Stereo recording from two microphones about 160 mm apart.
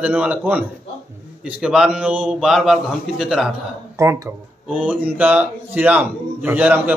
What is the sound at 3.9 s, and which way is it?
A man's voice, 20° right (ahead or behind).